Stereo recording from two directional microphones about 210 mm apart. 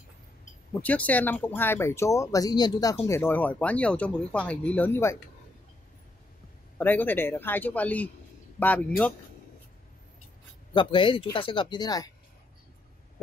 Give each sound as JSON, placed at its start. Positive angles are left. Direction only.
{"t": 0.8, "sound": "speech", "side_deg": 5}
{"t": 6.8, "sound": "speech", "side_deg": 10}
{"t": 10.7, "sound": "speech", "side_deg": 25}